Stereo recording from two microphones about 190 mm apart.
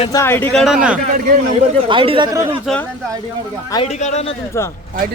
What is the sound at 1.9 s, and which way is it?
Speech, 25° right (ahead or behind).